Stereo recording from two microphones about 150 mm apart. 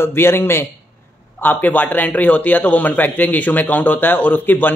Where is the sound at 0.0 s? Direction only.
15° left (ahead or behind).